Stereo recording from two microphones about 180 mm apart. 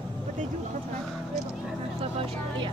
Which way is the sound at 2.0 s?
30° right (ahead or behind).